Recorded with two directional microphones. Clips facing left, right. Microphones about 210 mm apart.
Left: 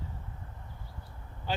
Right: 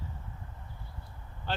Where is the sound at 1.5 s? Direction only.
10° left (ahead or behind).